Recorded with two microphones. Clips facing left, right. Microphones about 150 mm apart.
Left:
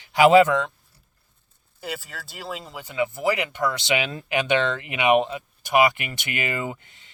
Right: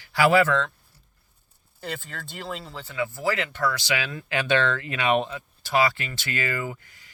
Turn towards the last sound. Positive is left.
turn(degrees=25)  # may be behind; listen again after turning